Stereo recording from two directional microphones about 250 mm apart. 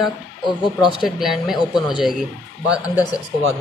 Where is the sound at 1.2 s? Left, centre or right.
Centre.